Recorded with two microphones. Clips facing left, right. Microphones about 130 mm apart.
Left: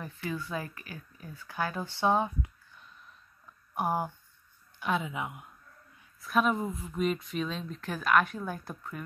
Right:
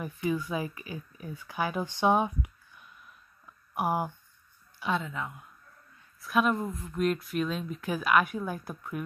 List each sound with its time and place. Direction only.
0.0 s speech: 15° right (ahead or behind)
4.8 s speech: 5° left (ahead or behind)
5.1 s speech: 15° left (ahead or behind)
6.2 s speech: centre (ahead or behind)